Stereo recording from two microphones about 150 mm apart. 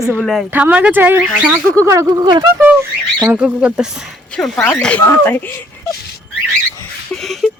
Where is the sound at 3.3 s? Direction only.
10° right (ahead or behind).